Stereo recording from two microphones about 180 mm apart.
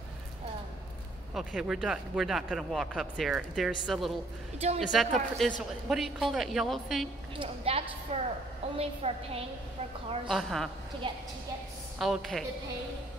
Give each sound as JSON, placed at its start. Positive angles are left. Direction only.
{"t": 1.3, "sound": "speech", "side_deg": -5}
{"t": 4.6, "sound": "a woman's voice", "side_deg": -35}
{"t": 4.9, "sound": "speech", "side_deg": 0}
{"t": 7.3, "sound": "a woman's voice", "side_deg": -30}
{"t": 10.2, "sound": "speech", "side_deg": 0}
{"t": 11.0, "sound": "a woman's voice", "side_deg": -25}
{"t": 12.0, "sound": "speech", "side_deg": 0}